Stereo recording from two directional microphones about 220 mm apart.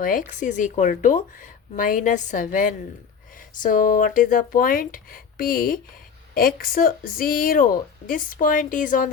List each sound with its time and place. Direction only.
0.0 s speech: 40° left (ahead or behind)